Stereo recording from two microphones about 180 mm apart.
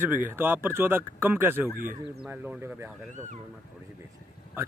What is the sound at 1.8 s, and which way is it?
Speech, 50° right (ahead or behind).